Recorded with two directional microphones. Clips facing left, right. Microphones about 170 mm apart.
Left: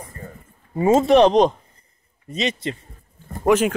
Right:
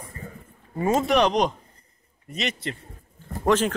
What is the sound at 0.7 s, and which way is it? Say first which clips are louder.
Speech: left 7 dB; 25° left (ahead or behind).